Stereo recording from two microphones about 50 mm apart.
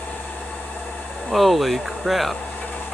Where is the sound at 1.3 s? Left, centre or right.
Centre.